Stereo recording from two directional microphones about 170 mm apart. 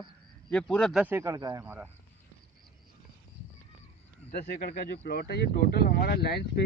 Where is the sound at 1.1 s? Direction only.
15° right (ahead or behind).